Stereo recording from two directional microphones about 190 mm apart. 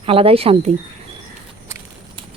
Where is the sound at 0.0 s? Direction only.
30° right (ahead or behind).